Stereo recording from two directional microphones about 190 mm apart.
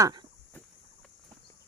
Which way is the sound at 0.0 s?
20° right (ahead or behind).